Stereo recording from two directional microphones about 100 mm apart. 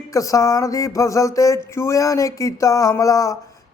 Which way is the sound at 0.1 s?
35° left (ahead or behind).